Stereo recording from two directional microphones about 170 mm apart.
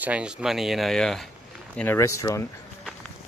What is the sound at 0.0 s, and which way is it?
Speech, 5° right (ahead or behind).